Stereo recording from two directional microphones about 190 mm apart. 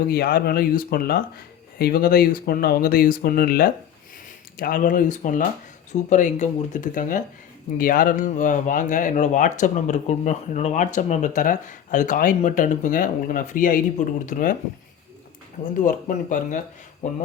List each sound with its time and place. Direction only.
0.1 s speech: 55° left (ahead or behind)
15.7 s speech: 45° left (ahead or behind)